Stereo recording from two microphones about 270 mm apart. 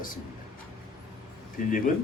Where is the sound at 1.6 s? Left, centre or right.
Left.